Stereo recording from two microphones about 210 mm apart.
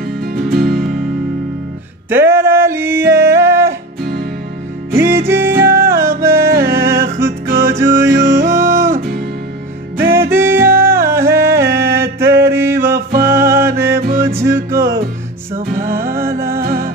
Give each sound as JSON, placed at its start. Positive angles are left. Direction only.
{"t": 0.2, "sound": "music", "side_deg": -50}
{"t": 2.0, "sound": "a sound", "side_deg": -10}
{"t": 4.0, "sound": "music", "side_deg": -50}
{"t": 4.9, "sound": "music", "side_deg": -10}
{"t": 15.5, "sound": "music", "side_deg": -40}
{"t": 16.3, "sound": "music", "side_deg": -10}
{"t": 16.6, "sound": "music", "side_deg": -45}